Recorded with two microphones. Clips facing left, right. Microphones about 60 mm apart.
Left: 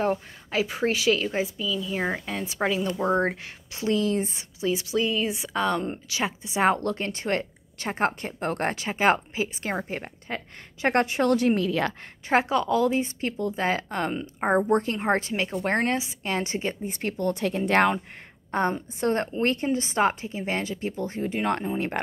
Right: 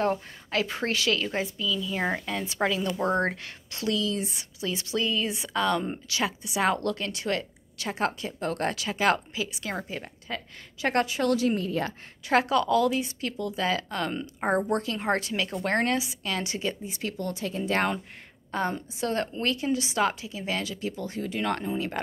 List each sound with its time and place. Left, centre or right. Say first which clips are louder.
0.0 s a woman's voice: left 1 dB; centre
2.4 s a woman's voice: left 2 dB; centre
4.0 s speech: left 4 dB; left
4.6 s a woman's voice: left 4 dB; centre; by 11.6 s left
11.6 s a woman's voice: left 4 dB; left
12.3 s a woman's voice: even; left
12.9 s speech: left 3 dB; left
14.1 s a woman's voice: left 3 dB; centre
15.6 s a woman's voice: even; centre
16.0 s a woman's voice: left 2 dB; left
16.8 s speech: left 5 dB; left
18.5 s speech: left 4 dB; left
21.7 s speech: left 2 dB; left